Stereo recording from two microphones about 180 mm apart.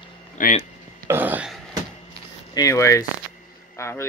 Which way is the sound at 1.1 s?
10° right (ahead or behind).